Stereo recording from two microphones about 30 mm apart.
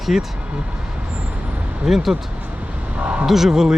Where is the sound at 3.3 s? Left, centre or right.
Centre.